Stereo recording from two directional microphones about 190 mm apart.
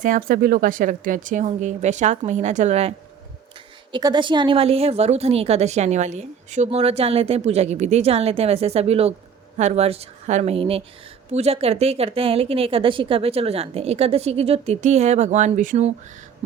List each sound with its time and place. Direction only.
0.0 s speech: 45° right (ahead or behind)
3.9 s speech: 25° right (ahead or behind); by 15.9 s 40° right (ahead or behind)